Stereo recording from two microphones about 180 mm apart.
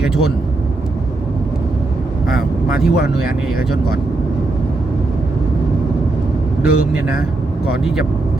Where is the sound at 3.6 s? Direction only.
60° left (ahead or behind).